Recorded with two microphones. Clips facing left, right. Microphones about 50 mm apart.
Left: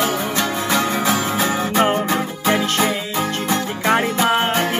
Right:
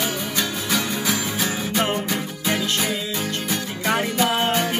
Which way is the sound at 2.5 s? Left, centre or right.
Left.